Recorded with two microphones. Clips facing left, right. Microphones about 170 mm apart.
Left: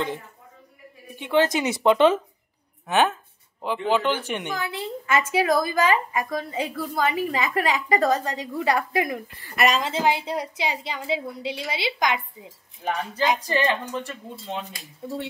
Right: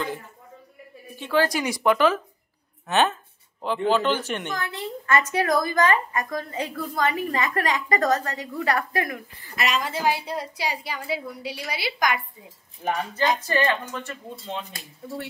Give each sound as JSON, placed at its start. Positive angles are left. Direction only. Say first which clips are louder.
{"t": 1.1, "sound": "a woman's voice", "louder": "left 2 dB", "side_deg": 20}
{"t": 2.9, "sound": "a woman's voice", "louder": "left 1 dB", "side_deg": 10}
{"t": 13.2, "sound": "a woman's voice", "louder": "left 1 dB", "side_deg": 15}